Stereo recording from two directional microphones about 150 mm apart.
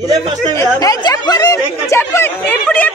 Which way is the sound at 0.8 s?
25° left (ahead or behind).